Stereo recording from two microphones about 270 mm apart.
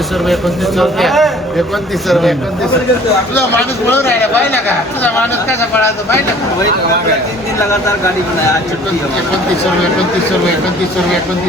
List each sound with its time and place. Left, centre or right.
0.8 s a man's voice: centre
3.8 s speech: centre